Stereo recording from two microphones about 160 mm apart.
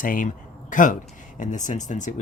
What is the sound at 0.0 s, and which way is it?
Speech, 60° left (ahead or behind).